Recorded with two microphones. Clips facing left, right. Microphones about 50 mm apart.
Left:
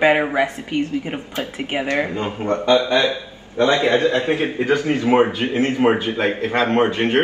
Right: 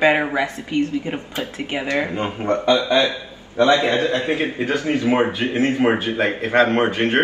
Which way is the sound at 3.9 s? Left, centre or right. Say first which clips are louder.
Left 2 dB; left.